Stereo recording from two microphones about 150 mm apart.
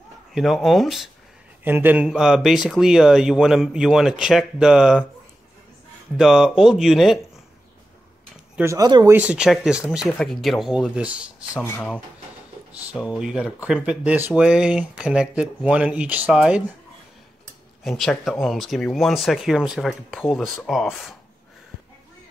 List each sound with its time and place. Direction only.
0.3 s speech: centre (ahead or behind)
1.6 s speech: 15° right (ahead or behind)
6.1 s speech: centre (ahead or behind)
8.5 s speech: 20° right (ahead or behind)
9.1 s speech: 10° right (ahead or behind)
11.6 s speech: 10° left (ahead or behind)
13.0 s speech: 5° right (ahead or behind)
17.8 s speech: centre (ahead or behind)